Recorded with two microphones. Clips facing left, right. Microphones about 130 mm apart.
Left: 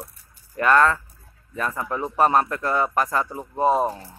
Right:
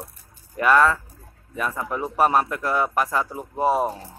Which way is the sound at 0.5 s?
5° right (ahead or behind).